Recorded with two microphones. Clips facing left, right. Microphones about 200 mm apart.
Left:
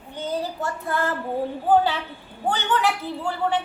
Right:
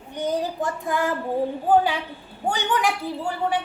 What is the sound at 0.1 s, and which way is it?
A child's voice, 15° right (ahead or behind).